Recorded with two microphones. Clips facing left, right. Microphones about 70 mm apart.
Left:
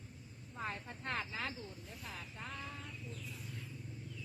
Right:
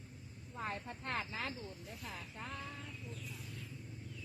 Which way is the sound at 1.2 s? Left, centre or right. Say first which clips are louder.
Even; left.